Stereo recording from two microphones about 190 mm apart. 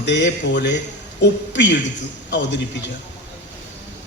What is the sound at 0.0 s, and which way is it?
A man's voice, 65° left (ahead or behind).